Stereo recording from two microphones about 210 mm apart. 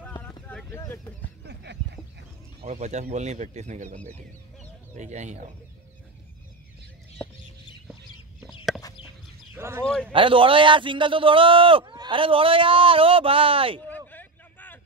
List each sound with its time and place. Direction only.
0.0 s a sound: 10° left (ahead or behind)
1.4 s a sound: 55° right (ahead or behind)
2.6 s speech: 35° right (ahead or behind)
9.5 s speech: 10° right (ahead or behind)
10.1 s a man's voice: 25° right (ahead or behind)
13.8 s vehicle: 10° left (ahead or behind)